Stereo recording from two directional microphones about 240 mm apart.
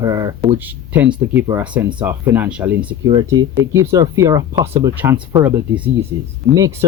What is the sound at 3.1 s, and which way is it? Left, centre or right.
Speech, centre.